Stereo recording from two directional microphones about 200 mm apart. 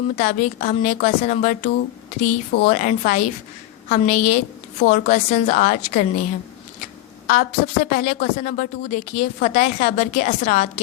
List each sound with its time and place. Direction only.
0.2 s a woman's voice: 40° left (ahead or behind)